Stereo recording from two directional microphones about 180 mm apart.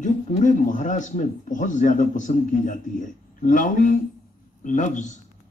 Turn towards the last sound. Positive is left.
turn(degrees=45)  # may be behind; listen again after turning